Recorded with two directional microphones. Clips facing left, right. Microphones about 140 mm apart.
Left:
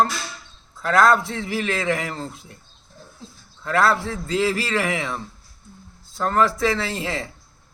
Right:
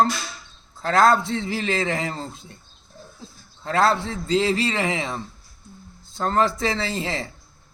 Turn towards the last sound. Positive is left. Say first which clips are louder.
# even
turn(degrees=-30)  # may be behind; listen again after turning